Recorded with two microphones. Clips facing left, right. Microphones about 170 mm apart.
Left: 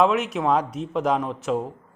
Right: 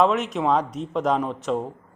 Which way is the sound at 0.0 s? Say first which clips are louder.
Even; centre (ahead or behind).